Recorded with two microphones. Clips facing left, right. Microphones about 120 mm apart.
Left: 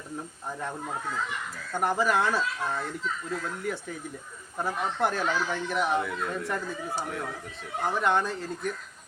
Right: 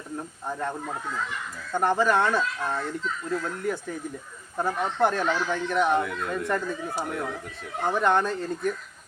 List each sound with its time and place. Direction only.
1.8 s speech: 5° left (ahead or behind)